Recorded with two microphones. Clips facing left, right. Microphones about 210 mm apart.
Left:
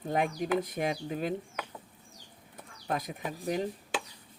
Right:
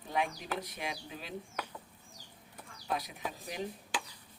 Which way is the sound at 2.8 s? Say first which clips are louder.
Left 3 dB; 50° left (ahead or behind).